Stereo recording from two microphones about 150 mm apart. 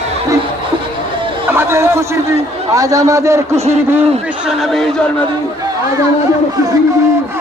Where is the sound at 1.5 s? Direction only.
15° right (ahead or behind).